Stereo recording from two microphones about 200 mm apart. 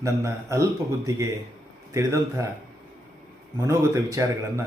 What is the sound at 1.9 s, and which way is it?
Speech, 15° right (ahead or behind).